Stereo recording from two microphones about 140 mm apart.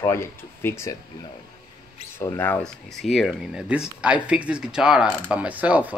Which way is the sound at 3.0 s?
Centre (ahead or behind).